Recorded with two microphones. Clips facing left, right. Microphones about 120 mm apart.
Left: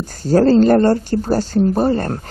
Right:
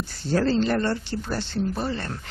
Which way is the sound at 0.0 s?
40° left (ahead or behind).